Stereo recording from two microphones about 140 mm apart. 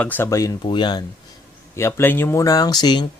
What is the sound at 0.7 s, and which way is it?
Speech, 30° left (ahead or behind).